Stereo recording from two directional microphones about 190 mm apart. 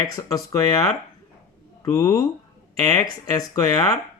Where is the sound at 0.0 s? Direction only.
20° left (ahead or behind).